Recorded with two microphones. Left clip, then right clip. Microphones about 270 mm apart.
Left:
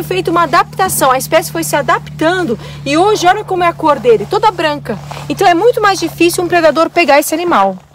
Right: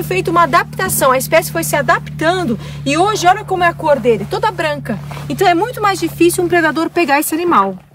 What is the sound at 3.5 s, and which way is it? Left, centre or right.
Speech, centre.